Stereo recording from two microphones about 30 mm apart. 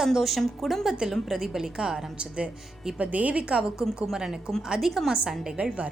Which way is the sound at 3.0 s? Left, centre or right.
Right.